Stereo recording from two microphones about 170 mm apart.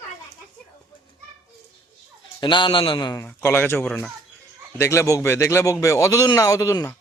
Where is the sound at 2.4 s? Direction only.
30° left (ahead or behind).